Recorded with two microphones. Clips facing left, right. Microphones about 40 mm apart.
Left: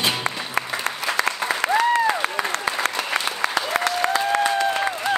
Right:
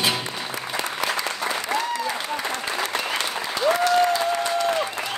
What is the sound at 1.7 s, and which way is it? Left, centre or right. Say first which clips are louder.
Applause: left 7 dB; left.